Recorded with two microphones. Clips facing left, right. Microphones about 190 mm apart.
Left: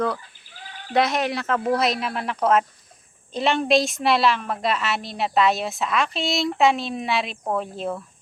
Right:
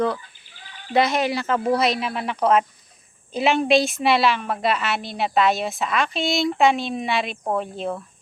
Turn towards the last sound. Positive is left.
turn(degrees=0)  # may be behind; listen again after turning